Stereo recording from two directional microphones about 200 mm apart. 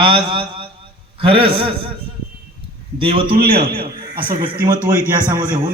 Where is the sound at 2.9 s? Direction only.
25° right (ahead or behind).